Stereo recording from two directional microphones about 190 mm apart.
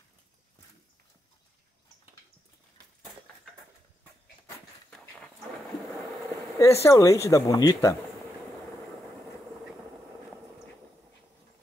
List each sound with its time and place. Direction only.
6.6 s speech: 15° left (ahead or behind)